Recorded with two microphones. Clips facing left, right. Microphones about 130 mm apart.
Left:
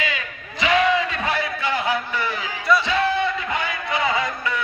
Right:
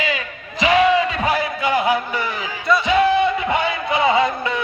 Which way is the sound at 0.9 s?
15° right (ahead or behind).